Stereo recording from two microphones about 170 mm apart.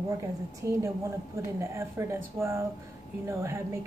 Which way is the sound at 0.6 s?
15° right (ahead or behind).